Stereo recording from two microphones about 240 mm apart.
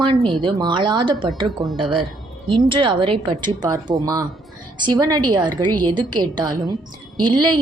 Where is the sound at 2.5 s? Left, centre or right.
Right.